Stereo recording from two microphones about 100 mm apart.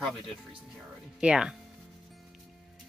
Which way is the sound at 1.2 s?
10° right (ahead or behind).